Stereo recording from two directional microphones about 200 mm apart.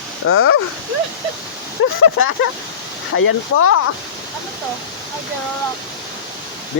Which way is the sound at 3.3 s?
90° left.